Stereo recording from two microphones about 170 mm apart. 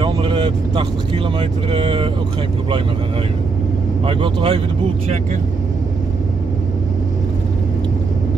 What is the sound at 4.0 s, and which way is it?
Speech, 30° right (ahead or behind).